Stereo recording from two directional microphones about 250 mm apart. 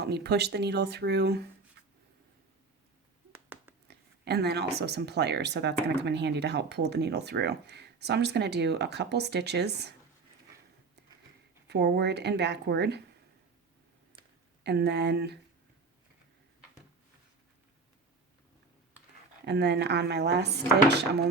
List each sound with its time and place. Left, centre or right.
0.0 s speech: right
1.8 s writing: right
3.8 s a sound: right
4.8 s speech: right
11.7 s speech: right
14.6 s speech: right
19.5 s speech: right